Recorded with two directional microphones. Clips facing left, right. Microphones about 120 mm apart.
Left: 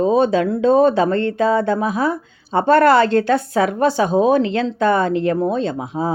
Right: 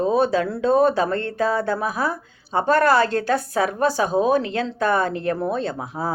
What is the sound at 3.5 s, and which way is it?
Speech, 35° right (ahead or behind).